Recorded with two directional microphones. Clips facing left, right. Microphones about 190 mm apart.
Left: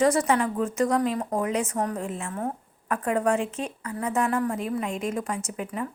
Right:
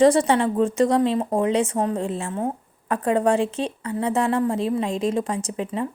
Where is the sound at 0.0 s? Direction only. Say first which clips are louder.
Right 5 dB; 30° right (ahead or behind).